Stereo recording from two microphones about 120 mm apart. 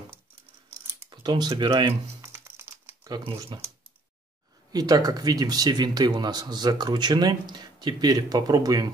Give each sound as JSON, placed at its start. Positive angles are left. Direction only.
{"t": 1.1, "sound": "speech", "side_deg": -40}
{"t": 2.2, "sound": "crumpling", "side_deg": -20}
{"t": 3.5, "sound": "speech", "side_deg": -40}
{"t": 4.7, "sound": "speech", "side_deg": -30}